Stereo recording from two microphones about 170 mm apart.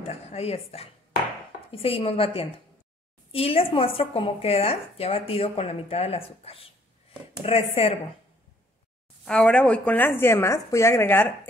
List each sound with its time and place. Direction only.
0.0 s a sound: 40° left (ahead or behind)
1.7 s a woman's voice: 35° left (ahead or behind)
7.7 s a woman's voice: 35° left (ahead or behind)
9.2 s a woman's voice: 5° left (ahead or behind)